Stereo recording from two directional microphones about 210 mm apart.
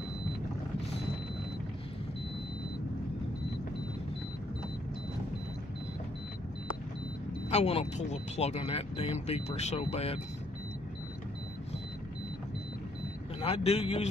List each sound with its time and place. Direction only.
7.4 s speech: 30° left (ahead or behind)
13.4 s speech: 30° left (ahead or behind)